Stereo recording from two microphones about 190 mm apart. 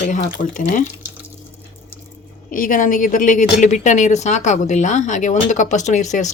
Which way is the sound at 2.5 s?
45° left (ahead or behind).